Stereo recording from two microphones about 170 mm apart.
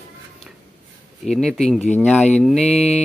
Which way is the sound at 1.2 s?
5° left (ahead or behind).